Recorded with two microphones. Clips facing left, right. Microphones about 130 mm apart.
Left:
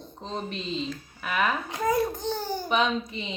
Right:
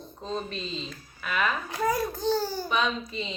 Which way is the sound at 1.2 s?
20° left (ahead or behind).